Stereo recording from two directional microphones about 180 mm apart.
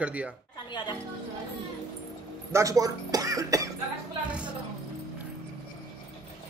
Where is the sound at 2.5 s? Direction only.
20° right (ahead or behind).